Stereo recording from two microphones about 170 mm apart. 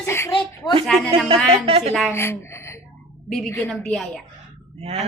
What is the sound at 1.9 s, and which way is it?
Speech, centre (ahead or behind).